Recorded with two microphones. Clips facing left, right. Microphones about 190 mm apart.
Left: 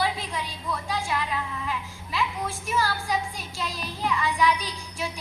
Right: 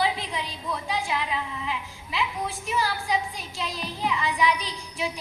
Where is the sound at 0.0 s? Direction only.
15° right (ahead or behind).